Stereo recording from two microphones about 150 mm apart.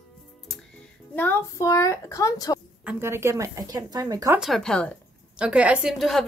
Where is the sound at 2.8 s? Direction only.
15° right (ahead or behind).